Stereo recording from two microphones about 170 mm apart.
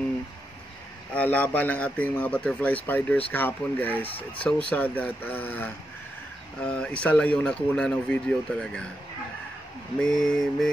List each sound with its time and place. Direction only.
1.1 s a man's voice: 10° left (ahead or behind)
10.0 s speech: 5° left (ahead or behind)